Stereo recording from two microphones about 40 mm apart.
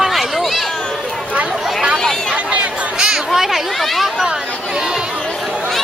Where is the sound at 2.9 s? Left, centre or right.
Centre.